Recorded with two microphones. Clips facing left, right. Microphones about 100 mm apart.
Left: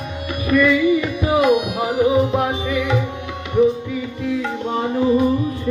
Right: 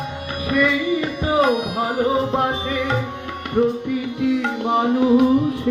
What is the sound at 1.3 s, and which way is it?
Music, 35° right (ahead or behind).